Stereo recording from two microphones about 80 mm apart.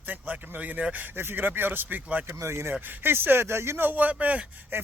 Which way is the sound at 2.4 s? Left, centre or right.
Right.